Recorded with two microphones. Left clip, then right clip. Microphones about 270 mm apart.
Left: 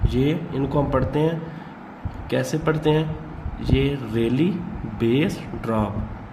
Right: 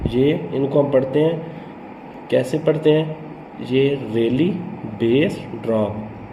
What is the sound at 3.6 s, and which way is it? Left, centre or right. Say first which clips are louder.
Speech: right 5 dB; left.